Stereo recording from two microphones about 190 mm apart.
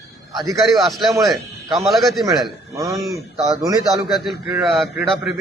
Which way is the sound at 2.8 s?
20° right (ahead or behind).